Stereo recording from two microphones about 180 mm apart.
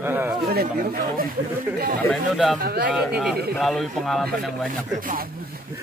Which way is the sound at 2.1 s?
Centre (ahead or behind).